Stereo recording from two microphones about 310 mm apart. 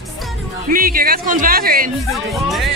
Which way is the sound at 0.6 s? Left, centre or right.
Right.